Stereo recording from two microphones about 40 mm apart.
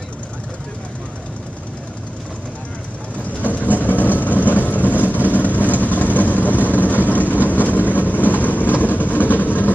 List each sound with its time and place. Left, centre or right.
3.4 s vehicle: left
7.4 s train: left